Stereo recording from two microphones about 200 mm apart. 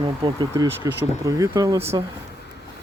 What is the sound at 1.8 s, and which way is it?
Speech, 30° right (ahead or behind).